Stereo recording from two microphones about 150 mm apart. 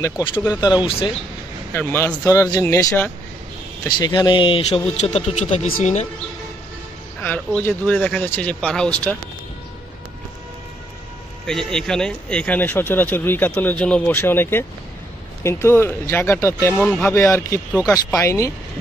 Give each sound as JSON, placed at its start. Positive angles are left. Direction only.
{"t": 0.0, "sound": "speech", "side_deg": 35}
{"t": 1.7, "sound": "speech", "side_deg": 15}
{"t": 4.0, "sound": "speech", "side_deg": 30}
{"t": 5.7, "sound": "speech", "side_deg": 70}
{"t": 7.2, "sound": "speech", "side_deg": 10}
{"t": 11.4, "sound": "speech", "side_deg": 5}
{"t": 16.8, "sound": "speech", "side_deg": 5}
{"t": 17.1, "sound": "speech", "side_deg": 20}